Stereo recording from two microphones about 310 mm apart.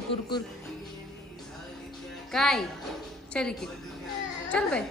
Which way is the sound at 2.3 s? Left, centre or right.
Centre.